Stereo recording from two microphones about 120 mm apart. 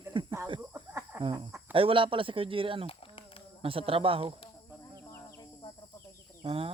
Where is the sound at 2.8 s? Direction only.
50° left (ahead or behind).